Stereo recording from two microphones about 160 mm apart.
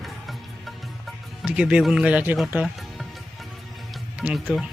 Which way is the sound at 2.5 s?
5° right (ahead or behind).